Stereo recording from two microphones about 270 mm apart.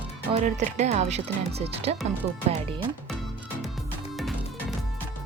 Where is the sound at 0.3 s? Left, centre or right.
Right.